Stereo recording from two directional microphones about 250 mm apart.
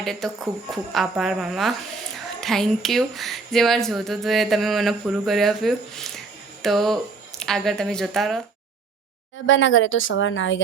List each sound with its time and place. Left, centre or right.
0.0 s speech: centre
9.5 s a woman's voice: left